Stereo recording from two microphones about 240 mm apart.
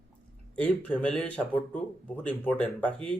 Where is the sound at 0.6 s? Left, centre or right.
Centre.